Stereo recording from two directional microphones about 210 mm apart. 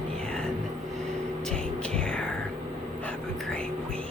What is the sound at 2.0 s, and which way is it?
Whispering, 5° left (ahead or behind).